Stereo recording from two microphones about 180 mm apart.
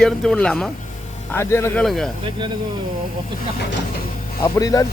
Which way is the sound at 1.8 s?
Centre (ahead or behind).